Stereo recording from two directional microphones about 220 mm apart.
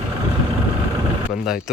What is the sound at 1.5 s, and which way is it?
Speech, centre (ahead or behind).